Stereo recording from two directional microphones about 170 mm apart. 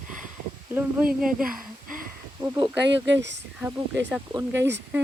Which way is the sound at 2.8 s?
90° right.